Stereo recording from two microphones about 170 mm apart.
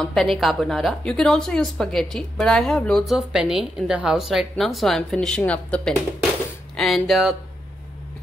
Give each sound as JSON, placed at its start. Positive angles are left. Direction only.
{"t": 0.0, "sound": "a woman's voice", "side_deg": 0}